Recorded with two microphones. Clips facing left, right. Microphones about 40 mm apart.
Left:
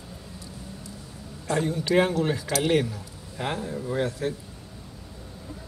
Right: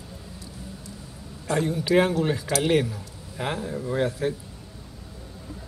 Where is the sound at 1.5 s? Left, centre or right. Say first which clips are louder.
Right 2 dB; centre.